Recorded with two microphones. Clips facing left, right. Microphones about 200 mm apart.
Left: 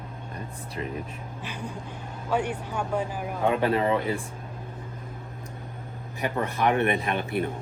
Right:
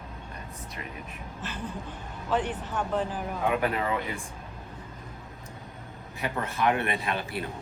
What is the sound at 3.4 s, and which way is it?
Speech, 30° left (ahead or behind).